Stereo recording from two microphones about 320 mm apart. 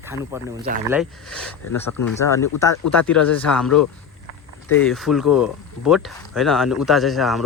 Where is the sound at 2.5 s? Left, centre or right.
Left.